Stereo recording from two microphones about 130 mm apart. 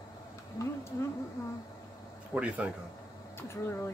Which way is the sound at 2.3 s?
10° right (ahead or behind).